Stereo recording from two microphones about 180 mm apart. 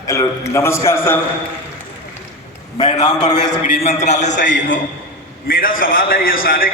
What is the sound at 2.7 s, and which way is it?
A man's voice, 40° left (ahead or behind).